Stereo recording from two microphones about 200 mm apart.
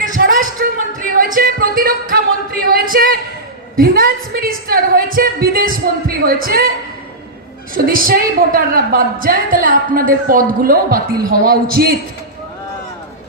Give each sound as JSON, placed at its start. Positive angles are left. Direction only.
{"t": 0.0, "sound": "a sound", "side_deg": -40}
{"t": 0.9, "sound": "music", "side_deg": -45}
{"t": 2.6, "sound": "a woman's voice", "side_deg": -45}
{"t": 7.7, "sound": "a woman's voice", "side_deg": -45}